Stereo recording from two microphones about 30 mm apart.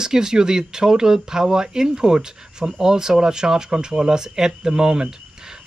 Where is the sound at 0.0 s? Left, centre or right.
Right.